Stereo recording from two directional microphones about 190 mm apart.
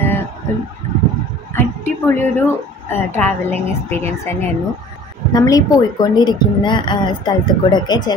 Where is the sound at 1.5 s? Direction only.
10° left (ahead or behind).